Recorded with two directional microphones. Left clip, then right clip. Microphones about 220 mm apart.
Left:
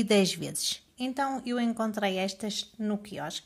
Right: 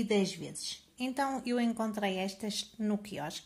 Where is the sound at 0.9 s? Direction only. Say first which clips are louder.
Even; 15° left (ahead or behind).